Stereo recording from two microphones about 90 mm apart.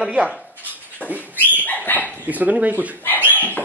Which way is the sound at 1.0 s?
15° left (ahead or behind).